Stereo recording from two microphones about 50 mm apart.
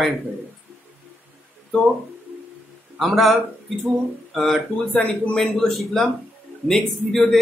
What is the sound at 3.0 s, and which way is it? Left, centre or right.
Speech, centre.